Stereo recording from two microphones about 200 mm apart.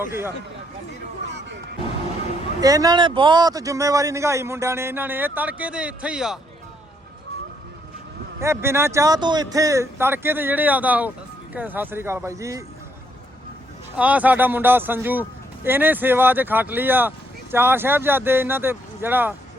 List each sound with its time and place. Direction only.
0.0 s speech: 10° right (ahead or behind)
1.3 s music: 60° right (ahead or behind)
2.6 s speech: 20° right (ahead or behind)
8.4 s speech: 15° right (ahead or behind)
13.9 s speech: 5° right (ahead or behind)